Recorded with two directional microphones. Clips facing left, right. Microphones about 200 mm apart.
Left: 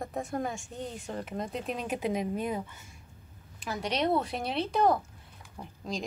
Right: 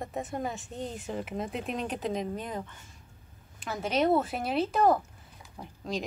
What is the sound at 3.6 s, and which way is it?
Speech, centre (ahead or behind).